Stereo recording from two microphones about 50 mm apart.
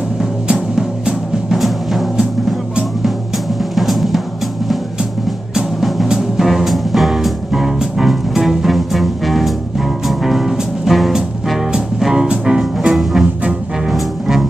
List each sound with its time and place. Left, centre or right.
0.2 s music: centre
3.7 s drum: centre
5.5 s music: centre
13.9 s double bass: centre